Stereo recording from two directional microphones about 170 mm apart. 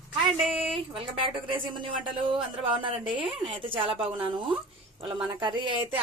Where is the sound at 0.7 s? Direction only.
30° right (ahead or behind).